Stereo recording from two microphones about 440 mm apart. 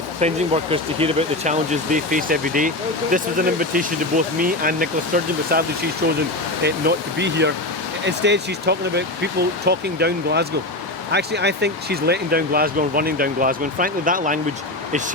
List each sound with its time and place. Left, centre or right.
0.2 s speech: centre